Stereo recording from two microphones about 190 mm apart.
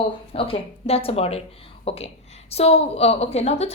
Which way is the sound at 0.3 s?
30° left (ahead or behind).